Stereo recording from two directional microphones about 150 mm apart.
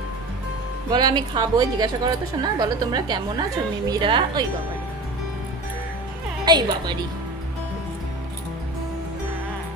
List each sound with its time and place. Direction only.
0.8 s a woman's voice: 30° right (ahead or behind)
6.4 s a woman's voice: 30° right (ahead or behind)